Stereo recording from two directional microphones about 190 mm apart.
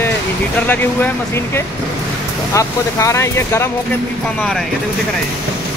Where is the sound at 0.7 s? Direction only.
10° left (ahead or behind).